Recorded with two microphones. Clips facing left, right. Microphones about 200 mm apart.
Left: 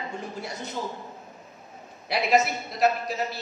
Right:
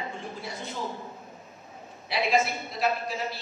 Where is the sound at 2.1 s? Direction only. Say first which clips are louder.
Left 3 dB; 40° left (ahead or behind).